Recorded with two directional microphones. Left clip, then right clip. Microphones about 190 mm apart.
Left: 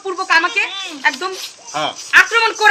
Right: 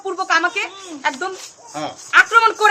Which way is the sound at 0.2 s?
20° right (ahead or behind).